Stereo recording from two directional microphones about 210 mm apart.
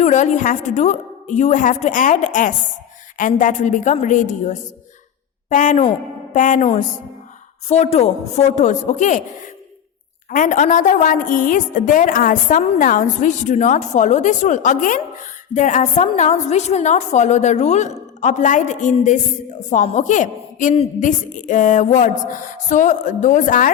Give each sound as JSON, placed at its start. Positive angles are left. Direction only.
{"t": 0.0, "sound": "a woman's voice", "side_deg": 35}
{"t": 10.2, "sound": "a woman's voice", "side_deg": 40}